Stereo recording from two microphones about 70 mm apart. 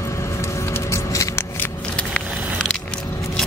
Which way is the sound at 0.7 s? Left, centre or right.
Left.